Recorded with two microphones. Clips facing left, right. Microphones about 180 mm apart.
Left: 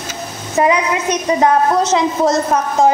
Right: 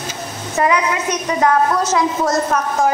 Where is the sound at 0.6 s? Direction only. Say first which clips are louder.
Left 2 dB; 20° left (ahead or behind).